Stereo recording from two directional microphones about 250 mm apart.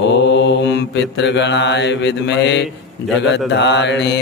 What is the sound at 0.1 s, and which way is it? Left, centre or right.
Mantra, left.